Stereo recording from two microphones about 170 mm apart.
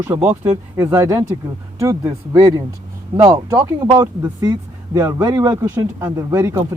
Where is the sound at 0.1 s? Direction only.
40° right (ahead or behind).